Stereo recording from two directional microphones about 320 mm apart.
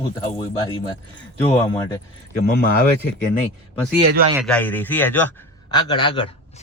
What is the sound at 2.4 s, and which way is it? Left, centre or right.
Speech, left.